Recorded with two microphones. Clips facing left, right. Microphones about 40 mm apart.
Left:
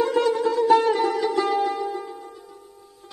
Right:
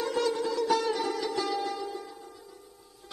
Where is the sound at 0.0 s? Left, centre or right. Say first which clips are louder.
Left 8 dB; left.